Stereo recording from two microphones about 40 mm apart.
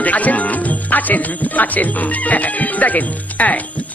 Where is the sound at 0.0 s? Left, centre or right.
Left.